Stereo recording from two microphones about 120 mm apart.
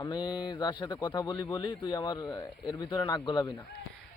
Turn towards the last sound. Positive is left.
turn(degrees=40)  # may be behind; listen again after turning